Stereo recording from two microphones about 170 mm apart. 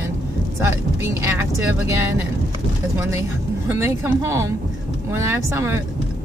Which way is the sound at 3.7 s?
15° right (ahead or behind).